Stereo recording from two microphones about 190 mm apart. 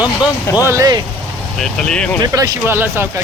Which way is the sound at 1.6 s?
5° left (ahead or behind).